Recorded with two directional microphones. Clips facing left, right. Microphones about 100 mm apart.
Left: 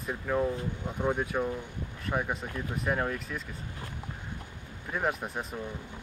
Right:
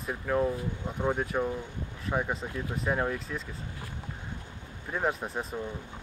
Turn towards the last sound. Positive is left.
turn(degrees=5)  # may be behind; listen again after turning